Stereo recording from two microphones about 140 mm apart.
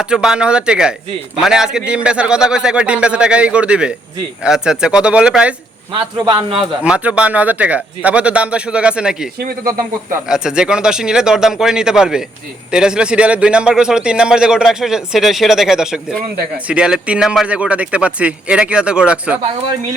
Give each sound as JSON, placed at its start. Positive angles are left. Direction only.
{"t": 0.0, "sound": "a man's voice", "side_deg": -5}
{"t": 5.9, "sound": "a man's voice", "side_deg": -35}
{"t": 6.8, "sound": "a man's voice", "side_deg": -5}